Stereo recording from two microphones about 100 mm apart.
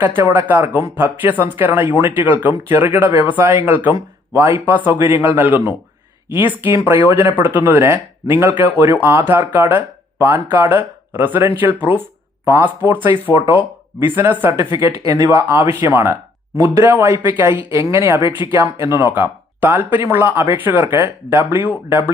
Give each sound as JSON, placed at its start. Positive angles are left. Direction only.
{"t": 0.0, "sound": "speech", "side_deg": -20}
{"t": 14.2, "sound": "speech", "side_deg": -20}
{"t": 14.8, "sound": "speech", "side_deg": -30}
{"t": 18.2, "sound": "speech", "side_deg": 55}
{"t": 18.5, "sound": "speech", "side_deg": -30}